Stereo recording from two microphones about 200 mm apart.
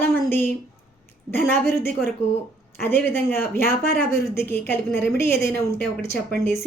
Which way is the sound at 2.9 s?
10° left (ahead or behind).